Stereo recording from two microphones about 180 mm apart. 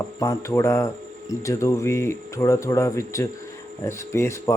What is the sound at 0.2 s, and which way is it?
A man's voice, 15° left (ahead or behind).